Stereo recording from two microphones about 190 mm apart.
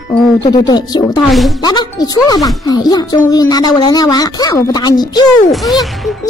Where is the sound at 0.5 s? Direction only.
20° left (ahead or behind).